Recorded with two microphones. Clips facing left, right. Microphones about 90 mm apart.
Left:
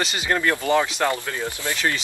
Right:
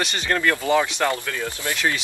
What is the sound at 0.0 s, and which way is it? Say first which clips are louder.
Speech: even; 5° left (ahead or behind).